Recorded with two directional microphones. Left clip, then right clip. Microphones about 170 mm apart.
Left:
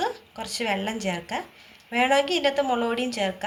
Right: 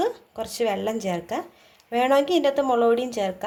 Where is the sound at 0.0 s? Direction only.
50° right (ahead or behind).